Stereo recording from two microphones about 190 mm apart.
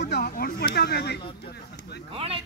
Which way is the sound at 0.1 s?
55° left (ahead or behind).